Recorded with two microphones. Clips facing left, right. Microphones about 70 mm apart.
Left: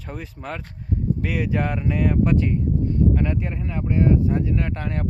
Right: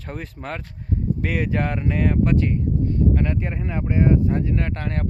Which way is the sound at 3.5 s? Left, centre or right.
Right.